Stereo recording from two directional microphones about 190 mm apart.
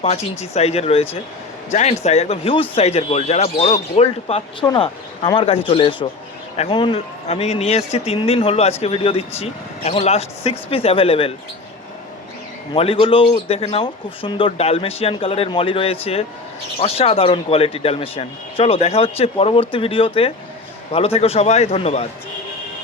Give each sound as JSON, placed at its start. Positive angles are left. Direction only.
{"t": 0.0, "sound": "speech", "side_deg": 35}
{"t": 12.7, "sound": "speech", "side_deg": 30}